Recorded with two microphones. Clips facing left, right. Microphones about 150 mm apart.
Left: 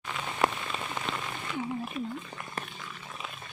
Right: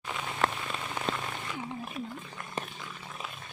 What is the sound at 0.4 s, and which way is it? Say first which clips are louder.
Rain on surface: left 2 dB; 10° left (ahead or behind).